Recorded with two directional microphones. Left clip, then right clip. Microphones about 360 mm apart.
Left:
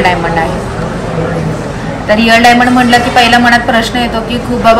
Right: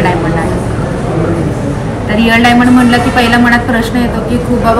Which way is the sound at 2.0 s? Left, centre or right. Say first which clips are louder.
Left 3 dB; left.